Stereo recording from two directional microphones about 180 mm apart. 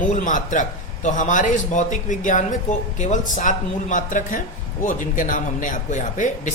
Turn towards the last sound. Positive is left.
turn(degrees=45)  # may be behind; listen again after turning